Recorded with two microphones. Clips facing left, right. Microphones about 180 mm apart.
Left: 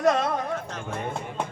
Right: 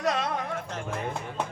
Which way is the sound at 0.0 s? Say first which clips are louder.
Left 5 dB; 45° left (ahead or behind).